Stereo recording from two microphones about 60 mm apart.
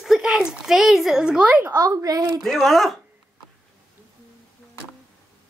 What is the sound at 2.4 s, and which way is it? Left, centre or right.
Speech, centre.